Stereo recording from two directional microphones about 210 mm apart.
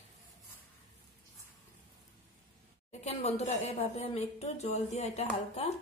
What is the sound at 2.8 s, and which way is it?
A woman's voice, 30° left (ahead or behind).